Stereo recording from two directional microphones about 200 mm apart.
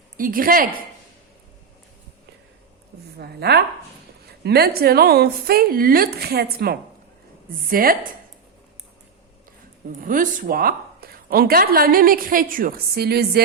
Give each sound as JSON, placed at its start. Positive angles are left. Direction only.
{"t": 0.2, "sound": "speech", "side_deg": -45}
{"t": 3.2, "sound": "speech", "side_deg": -55}
{"t": 10.0, "sound": "speech", "side_deg": -45}